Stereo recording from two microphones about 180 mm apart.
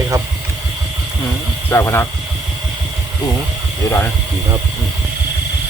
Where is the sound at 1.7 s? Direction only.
15° left (ahead or behind).